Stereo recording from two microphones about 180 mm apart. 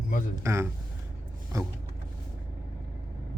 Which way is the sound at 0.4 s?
15° right (ahead or behind).